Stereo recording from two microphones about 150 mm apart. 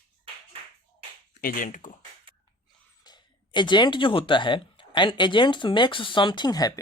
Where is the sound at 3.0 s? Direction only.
30° left (ahead or behind).